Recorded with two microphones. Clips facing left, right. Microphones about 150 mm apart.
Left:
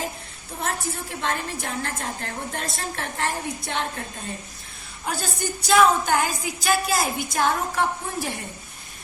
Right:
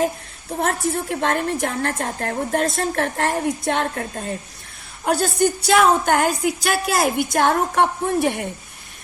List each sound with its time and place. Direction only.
0.6 s a woman's voice: 60° right (ahead or behind)
5.0 s a woman's voice: 55° right (ahead or behind)